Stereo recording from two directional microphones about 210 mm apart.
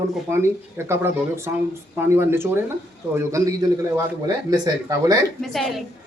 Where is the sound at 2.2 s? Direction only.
10° right (ahead or behind).